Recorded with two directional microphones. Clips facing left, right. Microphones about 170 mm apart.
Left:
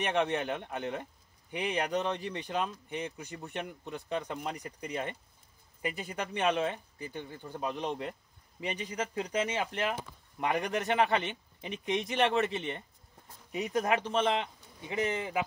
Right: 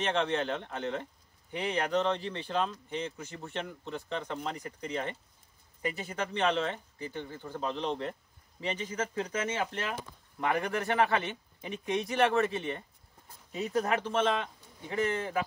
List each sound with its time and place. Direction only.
0.0 s speech: 15° left (ahead or behind)